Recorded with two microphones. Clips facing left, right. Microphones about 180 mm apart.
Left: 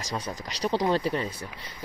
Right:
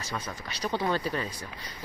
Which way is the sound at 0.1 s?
30° left (ahead or behind).